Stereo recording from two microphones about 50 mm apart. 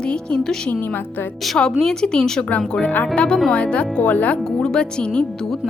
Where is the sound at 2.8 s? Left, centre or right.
Left.